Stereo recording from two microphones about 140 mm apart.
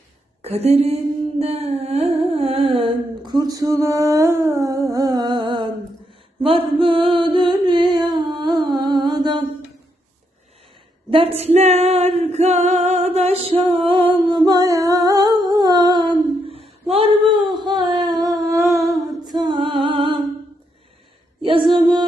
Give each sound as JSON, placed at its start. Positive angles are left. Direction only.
{"t": 0.4, "sound": "speech", "side_deg": -50}
{"t": 1.4, "sound": "humming", "side_deg": -45}
{"t": 6.4, "sound": "a sound", "side_deg": -40}
{"t": 11.1, "sound": "a woman's voice", "side_deg": -40}
{"t": 11.5, "sound": "singing", "side_deg": -50}
{"t": 18.9, "sound": "humming", "side_deg": -30}
{"t": 21.4, "sound": "a woman's voice", "side_deg": -40}